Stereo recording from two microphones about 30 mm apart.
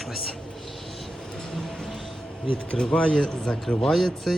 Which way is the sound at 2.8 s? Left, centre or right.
Left.